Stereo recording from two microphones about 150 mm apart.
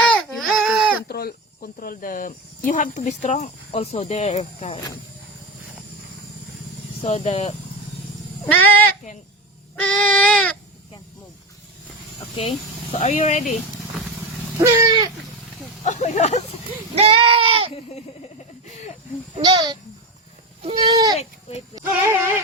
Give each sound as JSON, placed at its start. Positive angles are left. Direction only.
{"t": 0.1, "sound": "baby cry", "side_deg": 0}
{"t": 1.0, "sound": "speech", "side_deg": 90}
{"t": 7.0, "sound": "speech", "side_deg": 45}
{"t": 8.4, "sound": "speech", "side_deg": 10}
{"t": 9.7, "sound": "baby cry", "side_deg": 5}
{"t": 12.4, "sound": "speech", "side_deg": 40}
{"t": 14.6, "sound": "a sound", "side_deg": -25}
{"t": 15.8, "sound": "speech", "side_deg": 50}
{"t": 16.9, "sound": "speech", "side_deg": -40}
{"t": 19.4, "sound": "speech", "side_deg": -30}